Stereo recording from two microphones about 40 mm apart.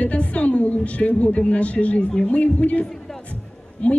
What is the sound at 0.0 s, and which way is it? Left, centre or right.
A woman's voice, left.